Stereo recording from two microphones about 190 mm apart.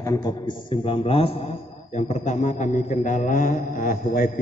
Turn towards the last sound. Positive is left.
turn(degrees=45)  # may be behind; listen again after turning